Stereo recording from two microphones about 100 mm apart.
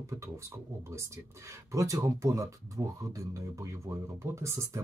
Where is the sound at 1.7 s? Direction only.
30° right (ahead or behind).